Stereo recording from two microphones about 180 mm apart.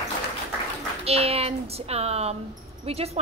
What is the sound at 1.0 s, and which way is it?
A woman's voice, 35° right (ahead or behind).